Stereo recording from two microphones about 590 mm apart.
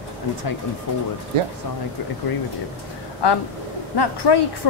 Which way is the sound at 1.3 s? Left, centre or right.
Right.